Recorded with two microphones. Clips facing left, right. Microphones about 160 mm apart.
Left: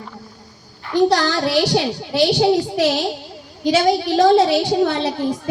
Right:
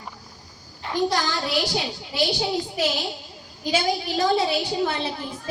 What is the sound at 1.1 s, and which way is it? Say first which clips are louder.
A child's voice: left 8 dB; 75° left (ahead or behind).